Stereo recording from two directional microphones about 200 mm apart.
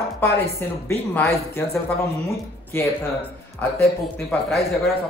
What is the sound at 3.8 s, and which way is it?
Speech, 5° left (ahead or behind).